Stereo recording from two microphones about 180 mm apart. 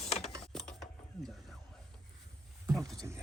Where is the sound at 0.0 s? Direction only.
35° left (ahead or behind).